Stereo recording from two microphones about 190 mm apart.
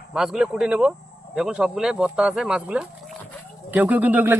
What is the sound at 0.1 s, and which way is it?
Speech, 5° right (ahead or behind).